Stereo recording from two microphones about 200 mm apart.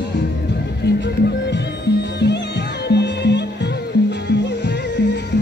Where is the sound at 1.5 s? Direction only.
60° left (ahead or behind).